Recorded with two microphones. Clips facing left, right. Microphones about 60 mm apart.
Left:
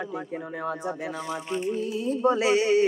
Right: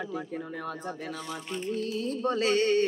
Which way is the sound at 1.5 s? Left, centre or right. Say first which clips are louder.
Left 3 dB; centre.